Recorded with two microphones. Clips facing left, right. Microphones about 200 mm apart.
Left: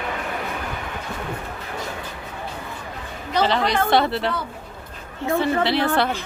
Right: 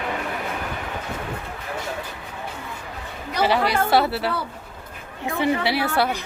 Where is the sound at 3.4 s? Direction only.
10° right (ahead or behind).